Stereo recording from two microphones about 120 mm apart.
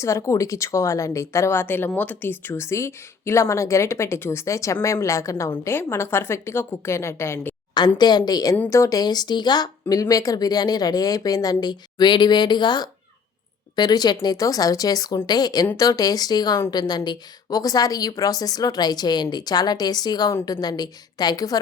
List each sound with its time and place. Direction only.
0.0 s a woman's voice: 25° left (ahead or behind)
7.7 s a woman's voice: 35° left (ahead or behind)